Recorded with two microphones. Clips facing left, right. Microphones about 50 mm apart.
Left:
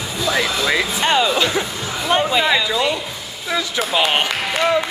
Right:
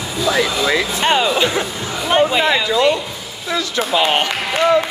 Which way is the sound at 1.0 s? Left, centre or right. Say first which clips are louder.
Right 1 dB; centre.